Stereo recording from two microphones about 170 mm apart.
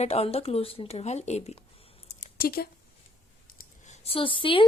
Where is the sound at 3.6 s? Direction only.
45° left (ahead or behind).